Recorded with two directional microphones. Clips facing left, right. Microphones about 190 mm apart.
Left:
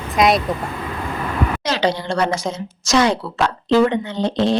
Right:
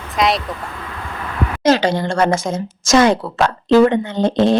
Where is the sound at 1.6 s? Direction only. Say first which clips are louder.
Right 10 dB; 45° right (ahead or behind).